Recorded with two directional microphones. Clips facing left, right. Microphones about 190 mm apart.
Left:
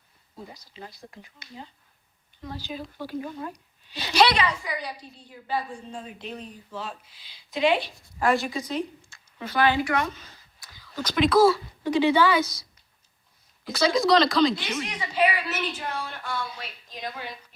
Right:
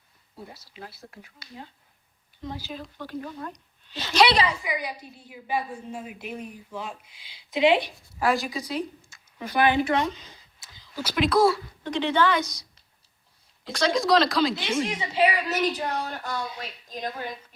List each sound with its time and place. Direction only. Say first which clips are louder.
0.5 s a woman's voice: even; 5° right (ahead or behind)
2.7 s a woman's voice: left 2 dB; 5° left (ahead or behind)
4.4 s a woman's voice: right 1 dB; 10° right (ahead or behind)
7.5 s speech: right 2 dB; 20° right (ahead or behind)
8.2 s a woman's voice: left 1 dB; centre (ahead or behind)
9.4 s speech: right 1 dB; 15° right (ahead or behind)
10.9 s a woman's voice: left 2 dB; 5° right (ahead or behind)
13.7 s a woman's voice: left 1 dB; centre (ahead or behind)
14.7 s a woman's voice: right 5 dB; 30° right (ahead or behind); by 17.3 s 45° right (ahead or behind)